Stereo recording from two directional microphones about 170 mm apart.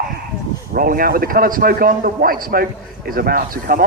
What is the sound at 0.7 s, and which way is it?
A man's voice, 55° right (ahead or behind).